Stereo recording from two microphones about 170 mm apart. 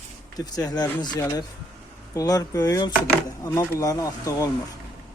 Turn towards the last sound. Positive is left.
turn(degrees=20)  # may be behind; listen again after turning